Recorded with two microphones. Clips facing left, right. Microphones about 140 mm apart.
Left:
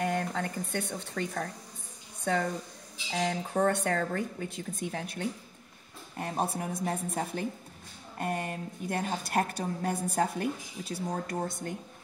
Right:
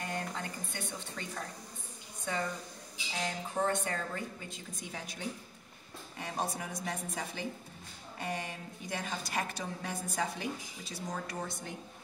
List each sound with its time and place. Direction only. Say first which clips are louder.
0.0 s a sound: left 8 dB; 60° left (ahead or behind)
1.1 s speech: left 11 dB; 55° left (ahead or behind)
3.1 s a woman's voice: left 7 dB; 65° left (ahead or behind)